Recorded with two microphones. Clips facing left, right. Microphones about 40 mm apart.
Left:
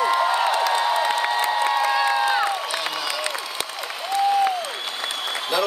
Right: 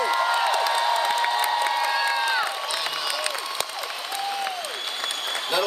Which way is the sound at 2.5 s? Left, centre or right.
Centre.